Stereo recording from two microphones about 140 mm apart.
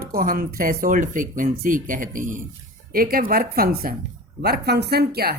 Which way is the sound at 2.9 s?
90° right.